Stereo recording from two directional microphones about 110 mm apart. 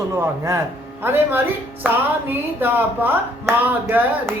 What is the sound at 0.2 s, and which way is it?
Speech, 25° right (ahead or behind).